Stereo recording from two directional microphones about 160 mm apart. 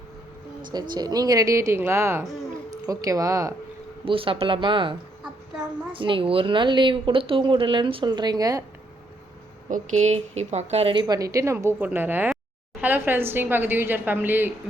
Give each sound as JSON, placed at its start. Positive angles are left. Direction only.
{"t": 0.7, "sound": "speech", "side_deg": -25}
{"t": 4.0, "sound": "a woman's voice", "side_deg": -35}
{"t": 9.6, "sound": "speech", "side_deg": -50}
{"t": 11.0, "sound": "a woman's voice", "side_deg": -20}